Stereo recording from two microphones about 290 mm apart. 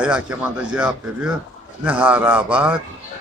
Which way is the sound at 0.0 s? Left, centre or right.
Centre.